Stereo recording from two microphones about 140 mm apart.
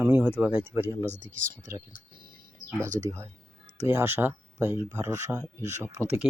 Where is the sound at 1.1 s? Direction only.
70° right (ahead or behind).